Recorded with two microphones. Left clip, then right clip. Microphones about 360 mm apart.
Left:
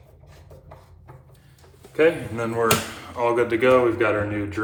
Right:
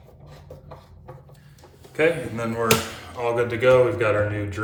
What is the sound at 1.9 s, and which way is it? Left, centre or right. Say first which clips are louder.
A man's voice: left 2 dB; centre.